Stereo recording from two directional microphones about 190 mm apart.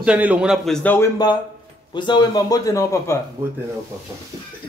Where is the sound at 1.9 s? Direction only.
25° left (ahead or behind).